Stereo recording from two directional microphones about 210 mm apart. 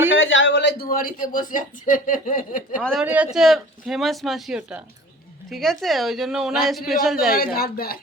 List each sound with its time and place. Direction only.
0.2 s speech: 65° left (ahead or behind); by 2.6 s 40° left (ahead or behind)
2.8 s a woman's voice: centre (ahead or behind)
7.3 s speech: 45° left (ahead or behind)